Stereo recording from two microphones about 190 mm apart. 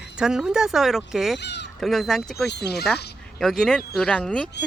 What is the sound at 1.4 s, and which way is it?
Speech, 65° left (ahead or behind).